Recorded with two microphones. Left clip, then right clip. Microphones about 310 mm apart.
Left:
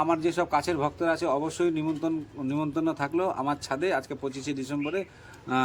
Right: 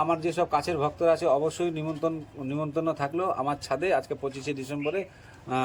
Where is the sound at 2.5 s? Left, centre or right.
Left.